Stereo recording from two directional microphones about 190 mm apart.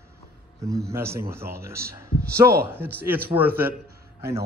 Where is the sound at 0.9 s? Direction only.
15° right (ahead or behind).